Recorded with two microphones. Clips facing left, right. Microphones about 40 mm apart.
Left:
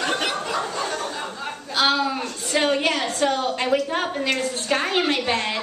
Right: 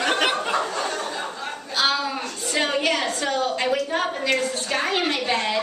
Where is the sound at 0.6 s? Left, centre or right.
Centre.